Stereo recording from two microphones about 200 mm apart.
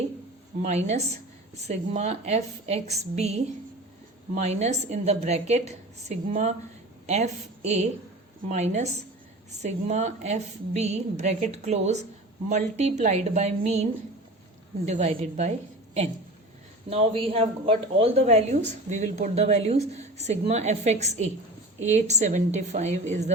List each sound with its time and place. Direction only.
0.6 s speech: 35° right (ahead or behind)
14.8 s speech: 35° right (ahead or behind)
16.9 s speech: 30° right (ahead or behind)